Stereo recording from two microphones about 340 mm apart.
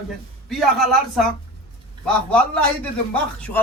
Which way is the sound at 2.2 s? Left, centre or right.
Centre.